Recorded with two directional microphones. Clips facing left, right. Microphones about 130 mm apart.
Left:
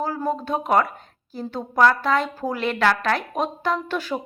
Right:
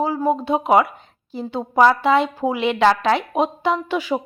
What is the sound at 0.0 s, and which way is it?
Speech, 10° right (ahead or behind).